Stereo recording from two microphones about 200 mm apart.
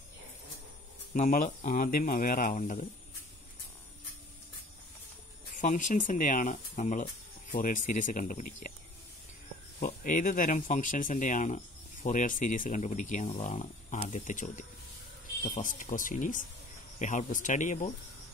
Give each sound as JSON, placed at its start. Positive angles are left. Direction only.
{"t": 1.1, "sound": "speech", "side_deg": 40}
{"t": 5.6, "sound": "speech", "side_deg": 40}
{"t": 9.8, "sound": "speech", "side_deg": 40}